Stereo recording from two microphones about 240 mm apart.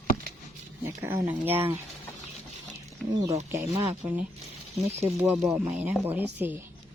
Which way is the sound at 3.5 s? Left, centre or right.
Centre.